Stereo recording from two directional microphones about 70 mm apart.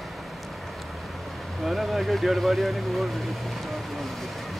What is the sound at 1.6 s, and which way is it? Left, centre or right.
Speech, centre.